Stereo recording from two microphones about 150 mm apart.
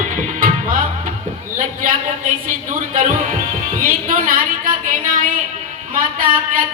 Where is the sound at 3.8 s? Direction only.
65° right (ahead or behind).